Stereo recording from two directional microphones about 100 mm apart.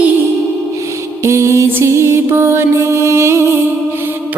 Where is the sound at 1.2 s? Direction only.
30° right (ahead or behind).